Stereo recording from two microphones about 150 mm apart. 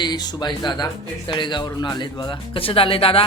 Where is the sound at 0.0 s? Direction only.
30° left (ahead or behind).